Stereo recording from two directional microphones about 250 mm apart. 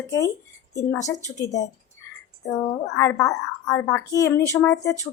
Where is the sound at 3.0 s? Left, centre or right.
Centre.